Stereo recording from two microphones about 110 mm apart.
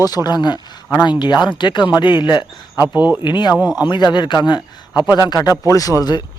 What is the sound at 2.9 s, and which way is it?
Speech, 15° right (ahead or behind).